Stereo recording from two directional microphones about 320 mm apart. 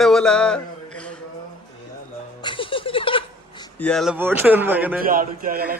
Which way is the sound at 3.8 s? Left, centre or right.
Centre.